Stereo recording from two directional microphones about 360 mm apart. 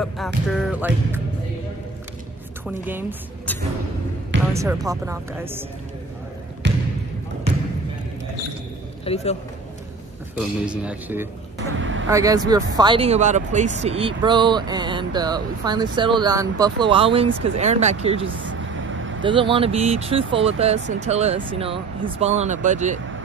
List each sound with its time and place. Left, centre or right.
0.0 s music: centre
2.6 s a woman's voice: centre
4.6 s speech: centre
6.6 s basketball bounce: right
9.0 s a man's voice: centre
10.3 s music: centre
11.8 s vehicle: right
12.1 s speech: centre
18.2 s vehicle: right
19.2 s speech: centre